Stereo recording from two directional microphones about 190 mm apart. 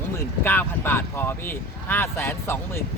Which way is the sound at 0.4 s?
10° left (ahead or behind).